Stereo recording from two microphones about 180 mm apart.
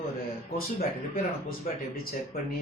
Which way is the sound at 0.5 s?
55° left (ahead or behind).